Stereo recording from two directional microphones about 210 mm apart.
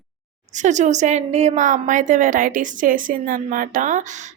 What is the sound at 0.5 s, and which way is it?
Speech, 35° right (ahead or behind).